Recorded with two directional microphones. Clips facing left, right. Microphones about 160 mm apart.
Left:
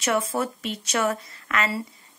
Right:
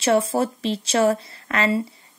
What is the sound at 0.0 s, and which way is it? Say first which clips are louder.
A woman's voice: right 5 dB; 30° right (ahead or behind).